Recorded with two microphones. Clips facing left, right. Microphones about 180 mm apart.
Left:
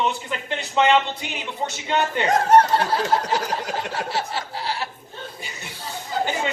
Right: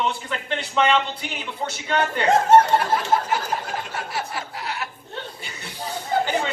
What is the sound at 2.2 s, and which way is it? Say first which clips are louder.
Speech: right 2 dB; 25° right (ahead or behind).